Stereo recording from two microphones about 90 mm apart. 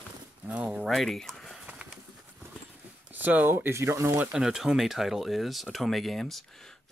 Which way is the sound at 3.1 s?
20° right (ahead or behind).